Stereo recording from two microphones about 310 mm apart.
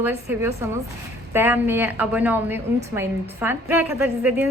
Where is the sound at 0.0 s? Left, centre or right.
Centre.